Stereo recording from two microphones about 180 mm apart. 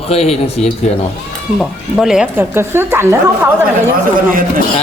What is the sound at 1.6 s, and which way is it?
Speech, centre (ahead or behind).